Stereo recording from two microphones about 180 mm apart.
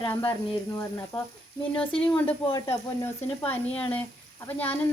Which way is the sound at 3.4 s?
10° left (ahead or behind).